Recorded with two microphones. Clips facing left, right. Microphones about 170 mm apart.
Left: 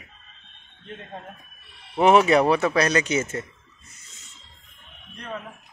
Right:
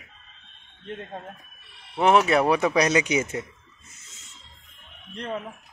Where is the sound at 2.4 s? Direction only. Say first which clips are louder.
Even; 15° right (ahead or behind).